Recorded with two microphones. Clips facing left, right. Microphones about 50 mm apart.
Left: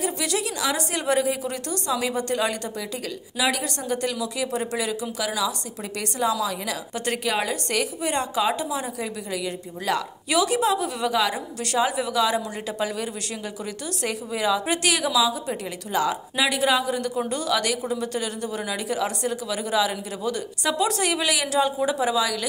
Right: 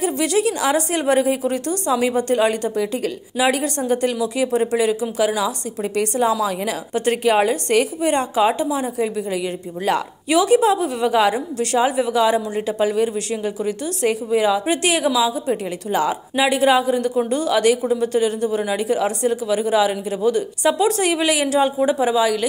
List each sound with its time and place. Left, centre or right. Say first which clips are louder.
0.0 s a woman's voice: right 8 dB; right
10.3 s a woman's voice: right 6 dB; centre
11.3 s a woman's voice: right 5 dB; centre